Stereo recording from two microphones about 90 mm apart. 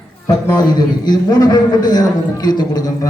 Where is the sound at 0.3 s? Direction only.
45° left (ahead or behind).